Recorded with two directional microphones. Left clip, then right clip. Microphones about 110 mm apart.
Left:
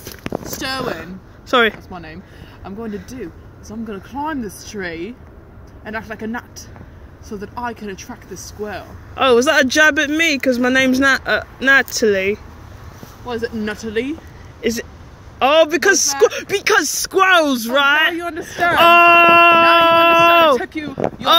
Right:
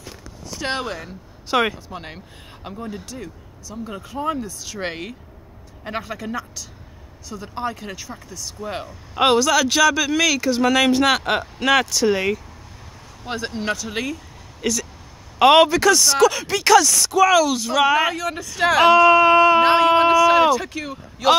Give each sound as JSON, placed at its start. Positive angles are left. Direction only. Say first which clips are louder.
{"t": 1.5, "sound": "speech", "louder": "left 5 dB", "side_deg": 10}
{"t": 1.9, "sound": "speech", "louder": "left 1 dB", "side_deg": -30}
{"t": 9.1, "sound": "speech", "louder": "left 3 dB", "side_deg": -10}
{"t": 13.6, "sound": "speech", "louder": "left 2 dB", "side_deg": -40}
{"t": 16.4, "sound": "speech", "louder": "right 1 dB", "side_deg": -50}
{"t": 17.3, "sound": "speech", "louder": "left 3 dB", "side_deg": -15}
{"t": 18.1, "sound": "speech", "louder": "left 2 dB", "side_deg": -45}
{"t": 18.8, "sound": "speech", "louder": "left 4 dB", "side_deg": 5}
{"t": 20.5, "sound": "speech", "louder": "left 5 dB", "side_deg": -45}